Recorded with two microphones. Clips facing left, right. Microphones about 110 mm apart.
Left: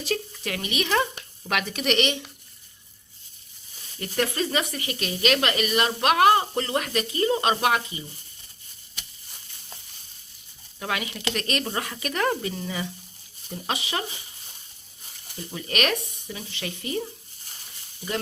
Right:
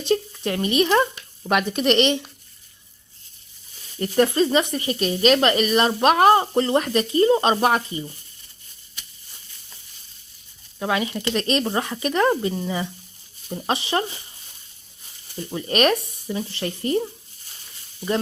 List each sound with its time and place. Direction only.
0.0 s a woman's voice: 30° right (ahead or behind)
1.8 s speech: 30° right (ahead or behind)
4.4 s a woman's voice: 30° right (ahead or behind)
10.8 s a woman's voice: 30° right (ahead or behind)
15.4 s a woman's voice: 30° right (ahead or behind)